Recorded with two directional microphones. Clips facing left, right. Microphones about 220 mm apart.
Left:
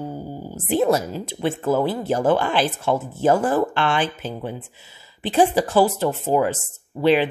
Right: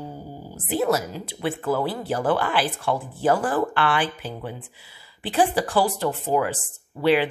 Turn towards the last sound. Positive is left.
turn(degrees=20)  # may be behind; listen again after turning